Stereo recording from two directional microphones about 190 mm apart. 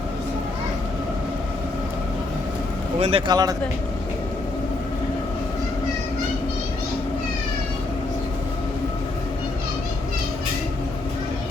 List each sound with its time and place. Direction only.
3.0 s speech: 30° right (ahead or behind)